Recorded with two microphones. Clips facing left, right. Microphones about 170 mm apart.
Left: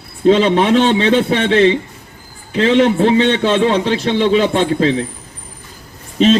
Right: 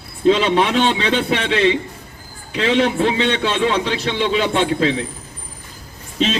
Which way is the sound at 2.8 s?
45° left (ahead or behind).